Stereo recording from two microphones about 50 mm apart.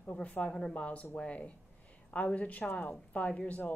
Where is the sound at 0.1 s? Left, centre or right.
Left.